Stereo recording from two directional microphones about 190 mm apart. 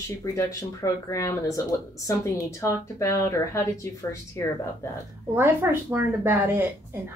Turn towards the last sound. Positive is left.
turn(degrees=-10)  # may be behind; listen again after turning